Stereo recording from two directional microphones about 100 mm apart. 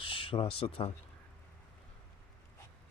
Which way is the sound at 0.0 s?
60° left (ahead or behind).